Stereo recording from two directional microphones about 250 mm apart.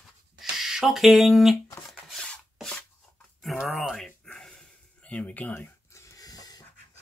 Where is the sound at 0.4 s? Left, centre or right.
Centre.